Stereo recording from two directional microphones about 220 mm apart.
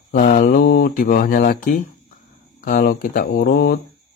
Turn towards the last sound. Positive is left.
turn(degrees=45)  # may be behind; listen again after turning